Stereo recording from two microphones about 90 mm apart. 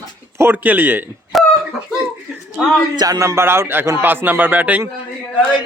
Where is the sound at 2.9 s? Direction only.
50° right (ahead or behind).